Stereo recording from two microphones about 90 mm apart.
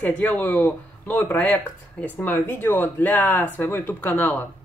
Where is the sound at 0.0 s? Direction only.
20° left (ahead or behind).